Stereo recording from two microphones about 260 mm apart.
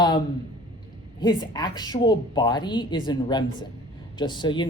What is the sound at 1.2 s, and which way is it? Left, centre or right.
Speech, centre.